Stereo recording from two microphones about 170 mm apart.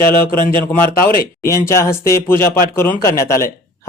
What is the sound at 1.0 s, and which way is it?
Speech, 60° left (ahead or behind).